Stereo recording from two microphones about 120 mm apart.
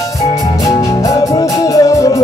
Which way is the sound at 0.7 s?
35° left (ahead or behind).